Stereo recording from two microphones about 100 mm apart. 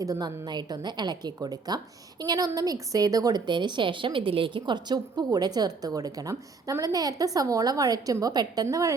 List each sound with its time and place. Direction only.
0.0 s a woman's voice: 40° right (ahead or behind)